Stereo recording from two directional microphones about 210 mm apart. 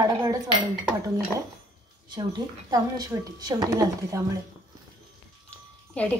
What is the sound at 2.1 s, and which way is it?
A woman's voice, 20° right (ahead or behind).